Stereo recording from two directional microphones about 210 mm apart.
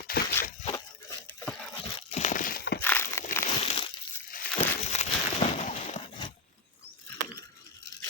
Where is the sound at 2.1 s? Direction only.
35° left (ahead or behind).